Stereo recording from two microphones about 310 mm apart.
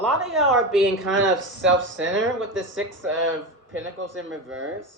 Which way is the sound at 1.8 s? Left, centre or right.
Right.